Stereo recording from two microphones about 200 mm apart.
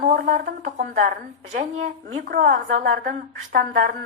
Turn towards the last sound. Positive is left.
turn(degrees=-45)  # may be behind; listen again after turning